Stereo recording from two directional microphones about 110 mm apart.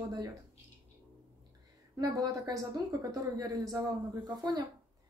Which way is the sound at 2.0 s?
35° right (ahead or behind).